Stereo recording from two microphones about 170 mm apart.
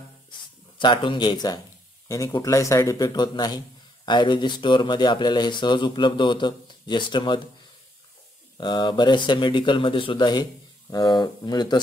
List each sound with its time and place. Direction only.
0.7 s speech: 30° left (ahead or behind)
8.5 s speech: 25° left (ahead or behind)